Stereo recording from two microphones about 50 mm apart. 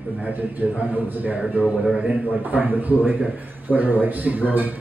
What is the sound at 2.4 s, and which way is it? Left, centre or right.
A man's voice, right.